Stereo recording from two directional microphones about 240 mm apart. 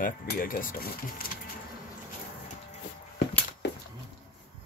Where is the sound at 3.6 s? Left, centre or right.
Left.